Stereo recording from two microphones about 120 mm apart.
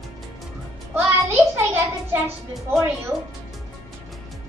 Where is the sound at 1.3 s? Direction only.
20° right (ahead or behind).